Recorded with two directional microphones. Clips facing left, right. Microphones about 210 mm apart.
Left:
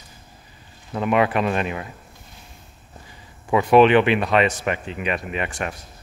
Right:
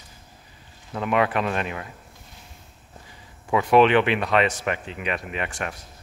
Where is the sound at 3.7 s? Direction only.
10° left (ahead or behind).